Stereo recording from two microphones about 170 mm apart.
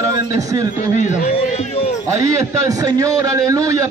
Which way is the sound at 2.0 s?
20° right (ahead or behind).